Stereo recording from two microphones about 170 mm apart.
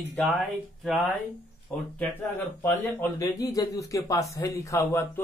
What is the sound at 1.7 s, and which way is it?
Speech, 10° left (ahead or behind).